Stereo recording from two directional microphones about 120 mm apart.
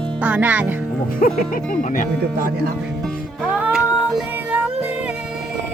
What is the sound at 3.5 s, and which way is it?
Music, 15° right (ahead or behind).